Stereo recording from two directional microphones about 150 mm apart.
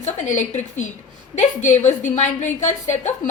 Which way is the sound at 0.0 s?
55° left (ahead or behind).